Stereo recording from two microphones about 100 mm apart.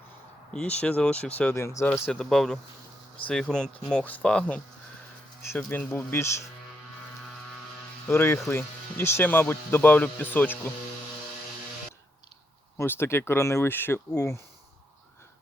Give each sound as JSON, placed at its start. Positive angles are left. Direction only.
{"t": 0.5, "sound": "speech", "side_deg": 10}
{"t": 1.6, "sound": "speech", "side_deg": 30}
{"t": 2.0, "sound": "speech", "side_deg": 5}
{"t": 5.7, "sound": "speech", "side_deg": 20}
{"t": 8.0, "sound": "speech", "side_deg": 25}
{"t": 12.7, "sound": "speech", "side_deg": 25}